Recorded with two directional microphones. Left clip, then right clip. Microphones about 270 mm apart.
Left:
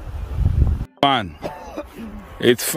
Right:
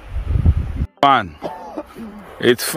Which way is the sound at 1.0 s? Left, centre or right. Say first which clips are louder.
Right 4 dB; centre.